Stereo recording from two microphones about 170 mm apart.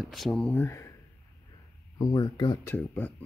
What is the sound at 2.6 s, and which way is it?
Speech, 10° left (ahead or behind).